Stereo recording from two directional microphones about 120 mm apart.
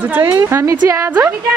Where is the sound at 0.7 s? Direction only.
35° right (ahead or behind).